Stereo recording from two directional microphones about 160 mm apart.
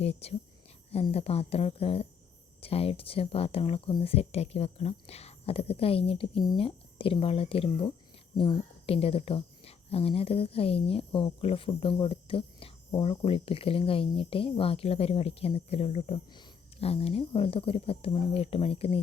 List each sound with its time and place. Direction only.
0.0 s speech: 40° left (ahead or behind)